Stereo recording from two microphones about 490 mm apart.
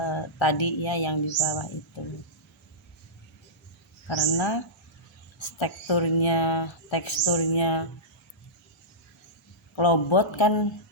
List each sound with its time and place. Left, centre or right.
0.0 s speech: left
4.1 s speech: left
9.7 s speech: left